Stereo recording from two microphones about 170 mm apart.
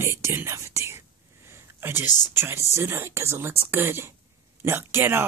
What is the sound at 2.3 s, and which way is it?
Speech, 15° right (ahead or behind).